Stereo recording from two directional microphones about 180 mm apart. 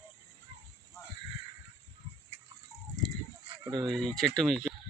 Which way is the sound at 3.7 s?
25° right (ahead or behind).